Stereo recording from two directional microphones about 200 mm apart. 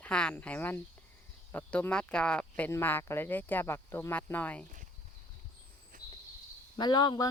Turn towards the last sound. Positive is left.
turn(degrees=20)  # may be behind; listen again after turning